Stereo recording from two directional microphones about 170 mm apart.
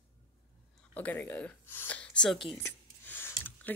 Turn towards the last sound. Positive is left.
turn(degrees=10)  # may be behind; listen again after turning